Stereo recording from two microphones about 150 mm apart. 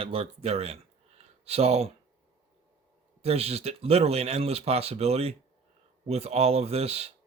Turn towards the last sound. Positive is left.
turn(degrees=-45)  # may be behind; listen again after turning